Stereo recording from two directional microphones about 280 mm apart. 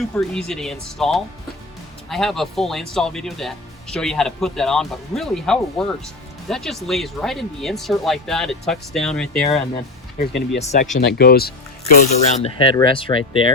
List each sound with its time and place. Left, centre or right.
0.0 s speech: centre
10.2 s speech: left
10.6 s speech: left
10.9 s speech: left
12.4 s speech: centre